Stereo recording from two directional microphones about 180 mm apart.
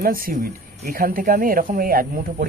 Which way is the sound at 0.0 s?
50° right (ahead or behind).